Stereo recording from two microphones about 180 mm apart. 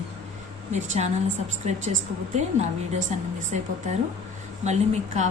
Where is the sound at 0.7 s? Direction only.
40° right (ahead or behind).